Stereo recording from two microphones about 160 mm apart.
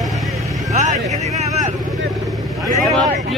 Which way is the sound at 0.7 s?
45° right (ahead or behind).